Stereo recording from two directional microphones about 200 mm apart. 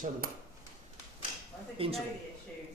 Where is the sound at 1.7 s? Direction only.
30° right (ahead or behind).